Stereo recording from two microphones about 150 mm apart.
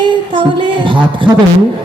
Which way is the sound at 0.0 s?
35° right (ahead or behind).